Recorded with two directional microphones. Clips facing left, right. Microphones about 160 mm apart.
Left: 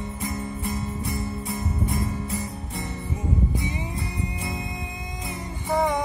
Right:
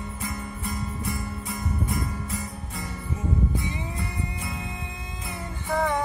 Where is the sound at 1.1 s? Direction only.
25° left (ahead or behind).